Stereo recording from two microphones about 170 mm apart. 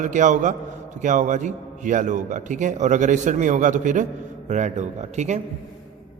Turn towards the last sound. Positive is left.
turn(degrees=-45)  # may be behind; listen again after turning